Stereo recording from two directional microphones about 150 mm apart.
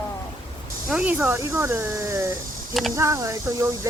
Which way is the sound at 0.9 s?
10° right (ahead or behind).